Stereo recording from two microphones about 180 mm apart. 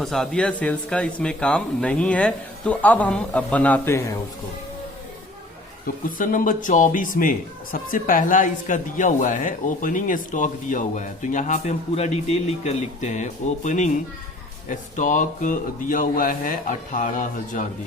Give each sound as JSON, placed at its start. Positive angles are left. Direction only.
{"t": 0.0, "sound": "speech", "side_deg": 0}
{"t": 6.1, "sound": "a man's voice", "side_deg": 50}